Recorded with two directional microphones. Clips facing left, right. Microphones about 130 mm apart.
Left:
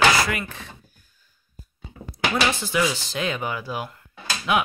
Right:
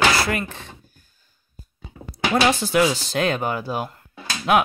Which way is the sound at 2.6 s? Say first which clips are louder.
Right 5 dB; 45° right (ahead or behind).